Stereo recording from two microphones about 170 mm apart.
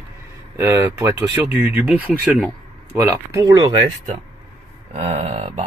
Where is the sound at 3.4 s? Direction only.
25° right (ahead or behind).